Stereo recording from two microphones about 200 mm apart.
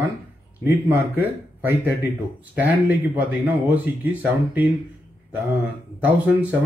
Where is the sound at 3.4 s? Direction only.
10° right (ahead or behind).